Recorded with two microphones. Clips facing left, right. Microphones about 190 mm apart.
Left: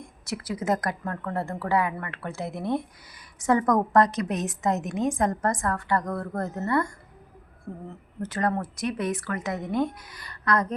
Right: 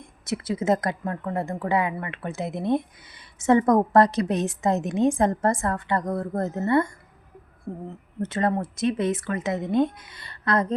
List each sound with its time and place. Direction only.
0.0 s a woman's voice: 25° right (ahead or behind)
8.2 s a woman's voice: 25° right (ahead or behind)